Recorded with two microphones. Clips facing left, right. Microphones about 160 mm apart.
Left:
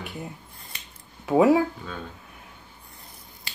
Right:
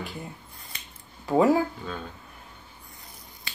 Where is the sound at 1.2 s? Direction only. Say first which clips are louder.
Left 2 dB; 5° left (ahead or behind).